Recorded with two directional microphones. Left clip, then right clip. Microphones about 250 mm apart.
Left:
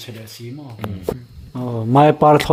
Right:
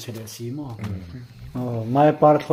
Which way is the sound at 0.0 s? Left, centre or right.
Right.